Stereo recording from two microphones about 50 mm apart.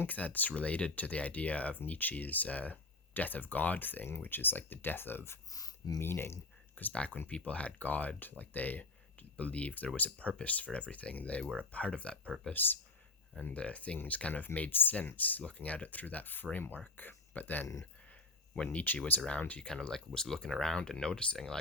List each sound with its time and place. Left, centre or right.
0.0 s speech: left
6.9 s speech: left
12.5 s speech: left
13.4 s speech: left
18.5 s speech: centre
19.4 s speech: left
19.6 s speech: centre